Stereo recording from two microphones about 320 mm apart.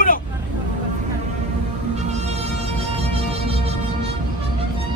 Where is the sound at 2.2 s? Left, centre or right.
Centre.